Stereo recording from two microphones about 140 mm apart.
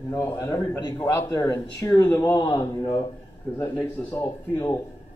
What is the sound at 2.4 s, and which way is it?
Speech, 25° left (ahead or behind).